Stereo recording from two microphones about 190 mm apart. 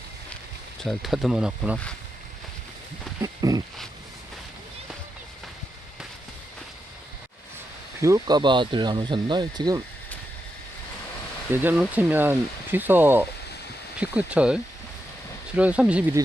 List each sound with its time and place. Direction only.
0.8 s speech: centre (ahead or behind)
3.2 s a sound: 20° right (ahead or behind)
8.0 s speech: 20° right (ahead or behind)
11.5 s speech: 10° right (ahead or behind)